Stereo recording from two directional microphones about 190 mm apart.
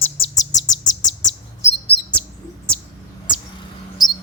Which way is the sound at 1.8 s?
10° left (ahead or behind).